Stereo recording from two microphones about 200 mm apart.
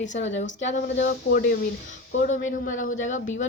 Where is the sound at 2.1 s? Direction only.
35° left (ahead or behind).